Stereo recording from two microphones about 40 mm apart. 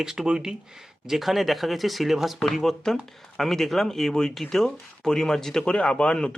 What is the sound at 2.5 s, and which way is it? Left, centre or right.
Speech, centre.